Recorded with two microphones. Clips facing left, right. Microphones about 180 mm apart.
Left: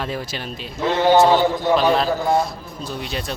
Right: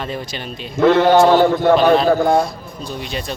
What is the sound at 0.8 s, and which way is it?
A man's voice, 60° right (ahead or behind).